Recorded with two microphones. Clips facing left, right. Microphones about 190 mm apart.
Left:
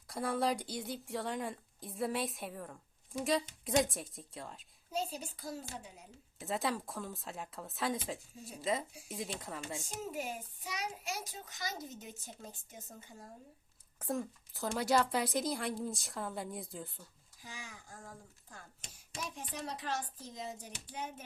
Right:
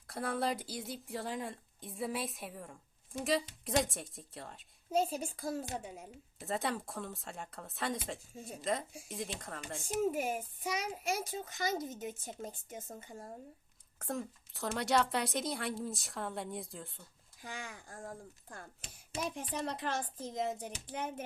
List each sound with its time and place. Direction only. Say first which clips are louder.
0.1 s a woman's voice: left 1 dB; centre (ahead or behind)
4.9 s a child's voice: right 6 dB; 50° right (ahead or behind)
6.4 s a woman's voice: even; centre (ahead or behind)
10.1 s a child's voice: right 6 dB; 50° right (ahead or behind)
14.0 s a woman's voice: left 2 dB; centre (ahead or behind)
17.4 s a child's voice: right 5 dB; 60° right (ahead or behind)
19.2 s a child's voice: right 5 dB; 55° right (ahead or behind)